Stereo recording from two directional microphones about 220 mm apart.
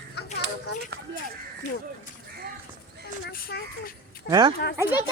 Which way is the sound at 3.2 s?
45° left (ahead or behind).